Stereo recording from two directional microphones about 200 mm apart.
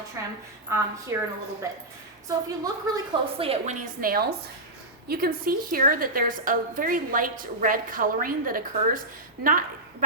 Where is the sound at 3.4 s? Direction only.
30° right (ahead or behind).